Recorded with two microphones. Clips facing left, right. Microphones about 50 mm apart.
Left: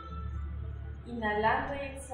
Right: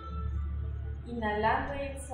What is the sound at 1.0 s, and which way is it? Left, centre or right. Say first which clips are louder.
Speech: even; left.